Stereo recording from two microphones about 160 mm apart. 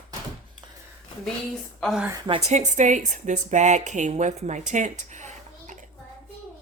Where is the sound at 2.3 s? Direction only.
45° right (ahead or behind).